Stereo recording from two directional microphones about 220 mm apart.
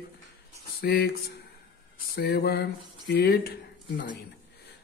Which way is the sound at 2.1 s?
45° left (ahead or behind).